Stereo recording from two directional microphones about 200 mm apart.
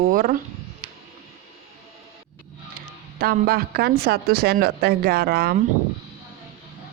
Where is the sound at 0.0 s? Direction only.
45° right (ahead or behind).